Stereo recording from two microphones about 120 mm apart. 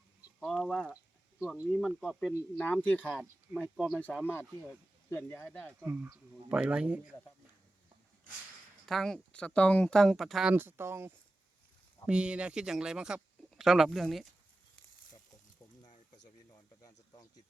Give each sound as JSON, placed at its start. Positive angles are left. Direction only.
{"t": 0.3, "sound": "a sound", "side_deg": 0}
{"t": 0.7, "sound": "speech", "side_deg": 10}
{"t": 1.4, "sound": "speech", "side_deg": -5}
{"t": 2.8, "sound": "speech", "side_deg": 10}
{"t": 3.5, "sound": "speech", "side_deg": -20}
{"t": 3.9, "sound": "speech", "side_deg": 10}
{"t": 5.8, "sound": "speech", "side_deg": -15}
{"t": 8.9, "sound": "speech", "side_deg": 5}
{"t": 10.5, "sound": "speech", "side_deg": -15}
{"t": 12.0, "sound": "speech", "side_deg": -10}
{"t": 15.9, "sound": "a sound", "side_deg": 90}
{"t": 16.5, "sound": "a sound", "side_deg": 30}